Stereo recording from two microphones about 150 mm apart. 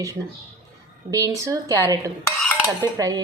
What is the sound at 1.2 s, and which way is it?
Speech, 20° right (ahead or behind).